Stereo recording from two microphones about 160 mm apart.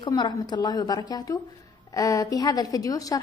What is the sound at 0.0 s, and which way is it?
A woman's voice, 25° left (ahead or behind).